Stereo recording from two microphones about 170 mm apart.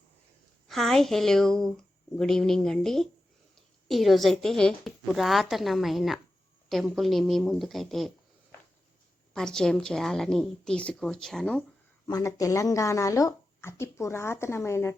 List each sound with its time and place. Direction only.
0.7 s speech: centre (ahead or behind)
9.3 s speech: 5° left (ahead or behind)
12.0 s speech: 20° left (ahead or behind)